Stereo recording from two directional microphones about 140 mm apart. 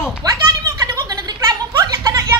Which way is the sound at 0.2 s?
25° right (ahead or behind).